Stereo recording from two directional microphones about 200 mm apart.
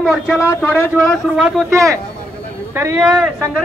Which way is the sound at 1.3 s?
5° right (ahead or behind).